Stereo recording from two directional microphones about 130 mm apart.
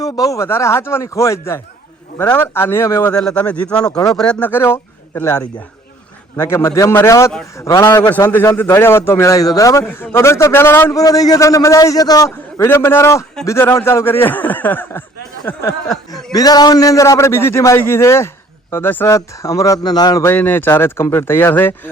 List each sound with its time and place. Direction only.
0.0 s a man's voice: 25° left (ahead or behind)
3.1 s speech: 5° left (ahead or behind)
3.9 s a man's voice: 30° left (ahead or behind)
4.2 s a man's voice: 10° left (ahead or behind)
11.0 s a man's voice: 30° left (ahead or behind); by 15.0 s 15° left (ahead or behind)
16.3 s a man's voice: 30° left (ahead or behind)
20.2 s speech: 15° left (ahead or behind)